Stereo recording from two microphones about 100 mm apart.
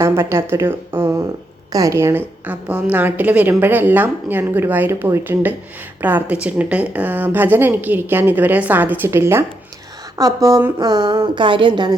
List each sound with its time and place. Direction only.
0.0 s a woman's voice: 25° right (ahead or behind)
2.5 s a woman's voice: 15° right (ahead or behind); by 10.6 s 35° right (ahead or behind)
10.8 s speech: 45° right (ahead or behind)